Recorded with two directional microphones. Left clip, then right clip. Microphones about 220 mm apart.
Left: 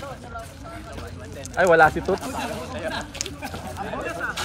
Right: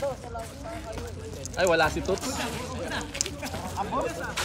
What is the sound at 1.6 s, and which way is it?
Speech, 30° left (ahead or behind).